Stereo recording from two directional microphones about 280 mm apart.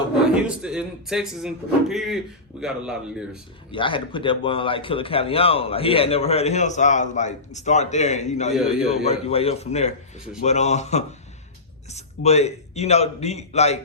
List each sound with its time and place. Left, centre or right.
0.4 s speech: centre
3.7 s a man's voice: centre